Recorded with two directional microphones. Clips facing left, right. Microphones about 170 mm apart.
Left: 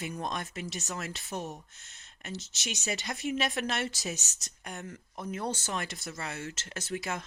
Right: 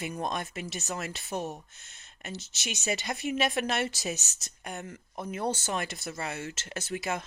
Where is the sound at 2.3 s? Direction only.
55° right (ahead or behind).